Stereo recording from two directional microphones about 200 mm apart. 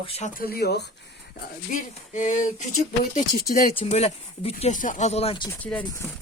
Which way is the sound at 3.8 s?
30° left (ahead or behind).